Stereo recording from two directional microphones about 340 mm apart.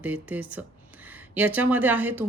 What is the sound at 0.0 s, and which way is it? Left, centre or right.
Speech, centre.